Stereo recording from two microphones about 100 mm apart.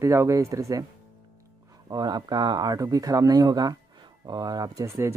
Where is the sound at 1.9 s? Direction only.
45° right (ahead or behind).